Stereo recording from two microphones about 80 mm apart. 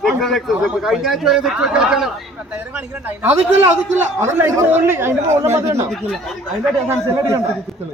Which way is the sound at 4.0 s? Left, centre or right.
Right.